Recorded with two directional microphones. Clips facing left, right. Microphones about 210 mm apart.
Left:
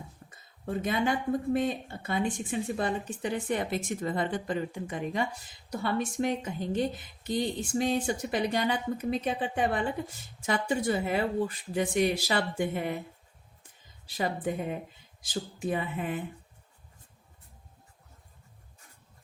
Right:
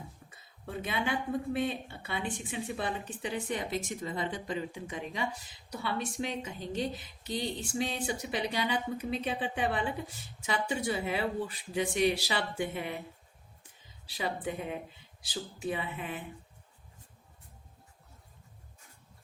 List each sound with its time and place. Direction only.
0.3 s a sound: 45° left (ahead or behind)
1.5 s a woman's voice: 45° left (ahead or behind)
14.1 s a woman's voice: 45° left (ahead or behind)